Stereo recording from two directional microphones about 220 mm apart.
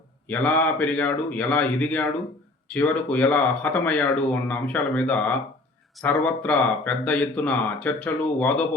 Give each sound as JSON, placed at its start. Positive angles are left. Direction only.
{"t": 0.3, "sound": "speech", "side_deg": 5}